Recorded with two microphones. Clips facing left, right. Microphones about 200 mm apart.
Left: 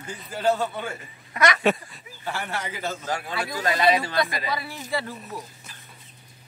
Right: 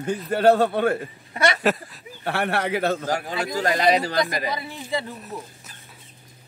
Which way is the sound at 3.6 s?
40° right (ahead or behind).